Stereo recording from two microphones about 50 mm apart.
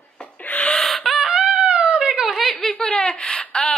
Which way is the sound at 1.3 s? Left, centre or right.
Centre.